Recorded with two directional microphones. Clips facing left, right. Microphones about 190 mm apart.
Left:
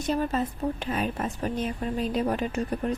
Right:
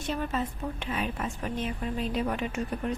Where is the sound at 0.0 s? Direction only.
40° left (ahead or behind).